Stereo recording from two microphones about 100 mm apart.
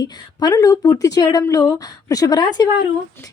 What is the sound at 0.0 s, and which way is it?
Speech, 40° left (ahead or behind).